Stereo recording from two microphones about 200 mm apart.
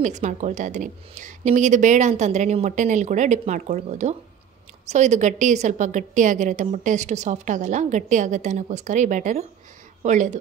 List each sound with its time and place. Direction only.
0.0 s a woman's voice: 35° right (ahead or behind)